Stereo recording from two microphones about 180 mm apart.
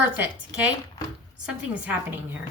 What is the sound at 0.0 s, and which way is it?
Speech, 10° right (ahead or behind).